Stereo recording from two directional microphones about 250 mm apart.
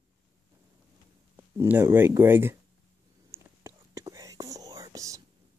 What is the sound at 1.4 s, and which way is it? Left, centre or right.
Speech, centre.